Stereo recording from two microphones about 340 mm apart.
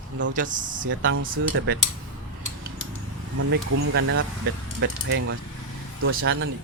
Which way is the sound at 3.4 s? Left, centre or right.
Right.